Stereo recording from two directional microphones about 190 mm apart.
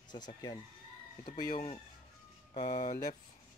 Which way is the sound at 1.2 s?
45° left (ahead or behind).